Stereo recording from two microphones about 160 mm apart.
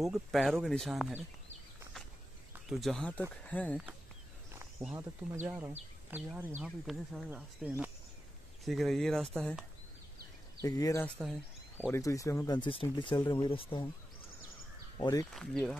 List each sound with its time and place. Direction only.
0.0 s speech: centre (ahead or behind)
2.7 s speech: centre (ahead or behind)
4.9 s speech: 15° right (ahead or behind); by 9.7 s 5° left (ahead or behind)
10.6 s speech: 20° left (ahead or behind)
11.1 s speech: 5° left (ahead or behind)
11.9 s speech: 20° left (ahead or behind)
15.0 s speech: 25° left (ahead or behind)
15.3 s speech: 5° left (ahead or behind)